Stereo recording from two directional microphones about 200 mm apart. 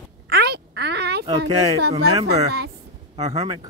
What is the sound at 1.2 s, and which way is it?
Speech, 20° right (ahead or behind).